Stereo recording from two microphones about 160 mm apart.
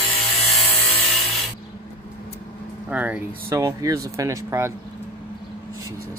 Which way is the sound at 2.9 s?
10° right (ahead or behind).